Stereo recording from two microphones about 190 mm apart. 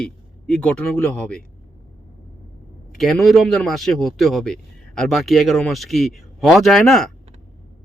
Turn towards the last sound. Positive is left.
turn(degrees=0)  # may be behind; listen again after turning